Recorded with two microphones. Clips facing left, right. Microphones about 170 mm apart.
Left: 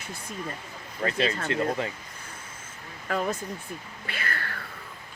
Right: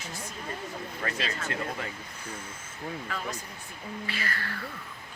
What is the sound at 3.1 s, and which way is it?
Speech, 45° left (ahead or behind).